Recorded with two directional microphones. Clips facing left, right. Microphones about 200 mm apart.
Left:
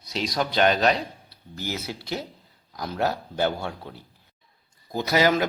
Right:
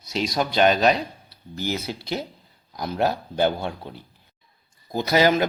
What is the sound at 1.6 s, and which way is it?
A man's voice, 25° right (ahead or behind).